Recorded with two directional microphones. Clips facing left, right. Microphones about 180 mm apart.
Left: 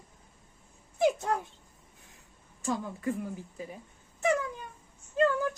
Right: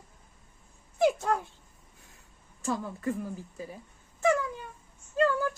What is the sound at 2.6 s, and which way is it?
Speech, 15° left (ahead or behind).